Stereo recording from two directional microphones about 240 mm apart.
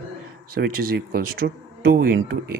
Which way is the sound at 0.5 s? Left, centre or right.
Right.